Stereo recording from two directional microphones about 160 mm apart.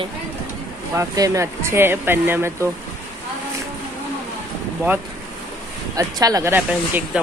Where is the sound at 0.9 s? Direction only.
20° right (ahead or behind).